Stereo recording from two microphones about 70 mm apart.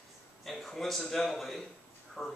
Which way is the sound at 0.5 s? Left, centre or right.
Centre.